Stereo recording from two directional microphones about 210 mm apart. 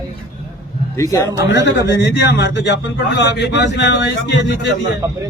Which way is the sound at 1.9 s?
55° left (ahead or behind).